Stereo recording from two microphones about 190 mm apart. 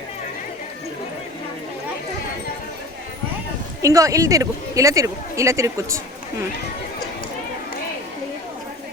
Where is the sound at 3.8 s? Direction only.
15° right (ahead or behind).